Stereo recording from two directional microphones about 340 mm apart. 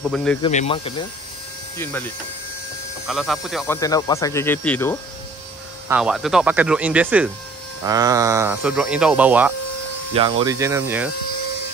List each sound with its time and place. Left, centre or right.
0.1 s speech: centre
0.4 s speech: centre
1.8 s speech: centre
10.1 s speech: centre